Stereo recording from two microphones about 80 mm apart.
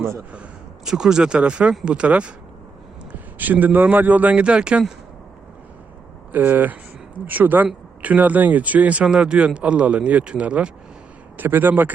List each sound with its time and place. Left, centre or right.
0.9 s a man's voice: centre
6.3 s a man's voice: right